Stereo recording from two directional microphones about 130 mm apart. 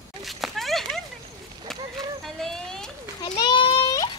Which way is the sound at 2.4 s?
5° left (ahead or behind).